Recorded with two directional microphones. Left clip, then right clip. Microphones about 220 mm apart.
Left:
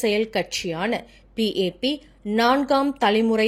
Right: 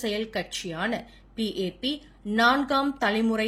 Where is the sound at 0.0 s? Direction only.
30° left (ahead or behind).